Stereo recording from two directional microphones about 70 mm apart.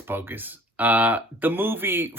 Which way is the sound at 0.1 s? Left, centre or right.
Right.